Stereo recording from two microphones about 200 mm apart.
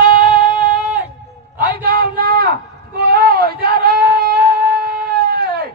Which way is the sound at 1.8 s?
50° right (ahead or behind).